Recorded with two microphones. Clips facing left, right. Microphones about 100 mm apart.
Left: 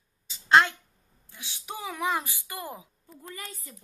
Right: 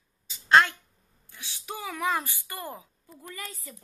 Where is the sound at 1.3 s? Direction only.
20° left (ahead or behind).